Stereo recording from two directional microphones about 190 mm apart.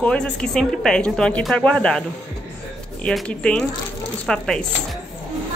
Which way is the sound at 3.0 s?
5° left (ahead or behind).